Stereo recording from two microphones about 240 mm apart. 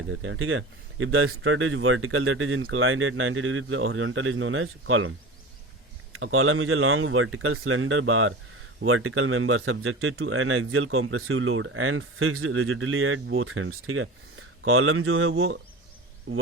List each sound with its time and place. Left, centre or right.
0.1 s speech: right
6.1 s speech: right